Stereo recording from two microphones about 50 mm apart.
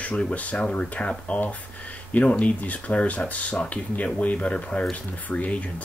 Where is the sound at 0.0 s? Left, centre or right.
Left.